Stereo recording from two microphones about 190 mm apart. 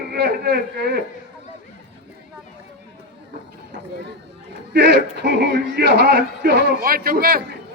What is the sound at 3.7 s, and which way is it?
Speech, 65° right (ahead or behind).